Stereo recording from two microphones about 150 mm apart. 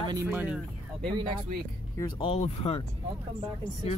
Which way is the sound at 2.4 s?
45° left (ahead or behind).